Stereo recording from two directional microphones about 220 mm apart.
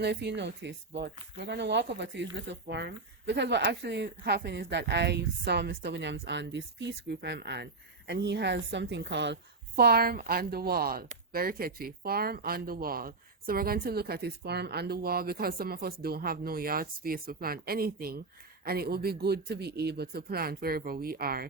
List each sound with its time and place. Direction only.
0.0 s speech: 50° right (ahead or behind)